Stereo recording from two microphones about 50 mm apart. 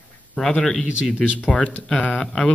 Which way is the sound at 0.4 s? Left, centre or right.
Centre.